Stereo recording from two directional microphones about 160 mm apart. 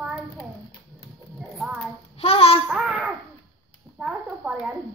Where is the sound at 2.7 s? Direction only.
5° right (ahead or behind).